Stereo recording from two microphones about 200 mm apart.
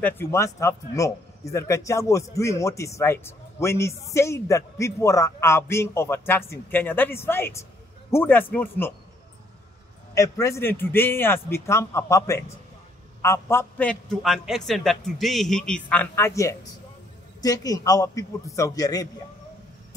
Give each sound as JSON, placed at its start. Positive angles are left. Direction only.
{"t": 0.0, "sound": "speech", "side_deg": 15}
{"t": 10.1, "sound": "a man's voice", "side_deg": 15}